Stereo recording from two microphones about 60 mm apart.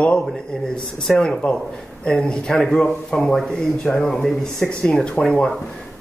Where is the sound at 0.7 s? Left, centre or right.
Centre.